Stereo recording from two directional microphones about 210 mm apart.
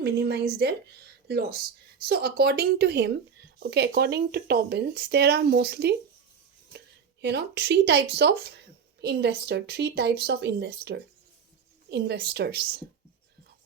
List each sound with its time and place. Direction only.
0.0 s speech: 50° right (ahead or behind)